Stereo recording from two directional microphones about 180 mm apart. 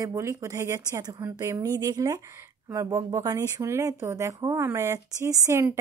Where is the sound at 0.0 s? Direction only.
15° right (ahead or behind).